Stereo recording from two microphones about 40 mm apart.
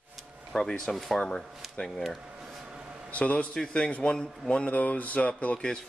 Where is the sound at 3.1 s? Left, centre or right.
Left.